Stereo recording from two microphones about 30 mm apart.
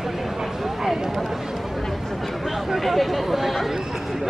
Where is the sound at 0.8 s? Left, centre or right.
Centre.